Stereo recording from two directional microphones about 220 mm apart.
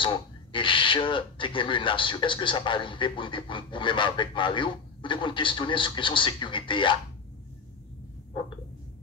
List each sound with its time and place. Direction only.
0.0 s speech: 20° left (ahead or behind)